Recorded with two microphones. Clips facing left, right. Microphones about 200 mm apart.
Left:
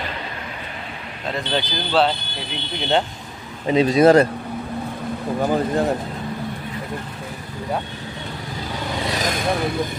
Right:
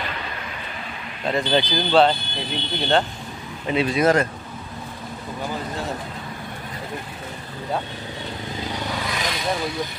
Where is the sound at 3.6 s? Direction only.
35° left (ahead or behind).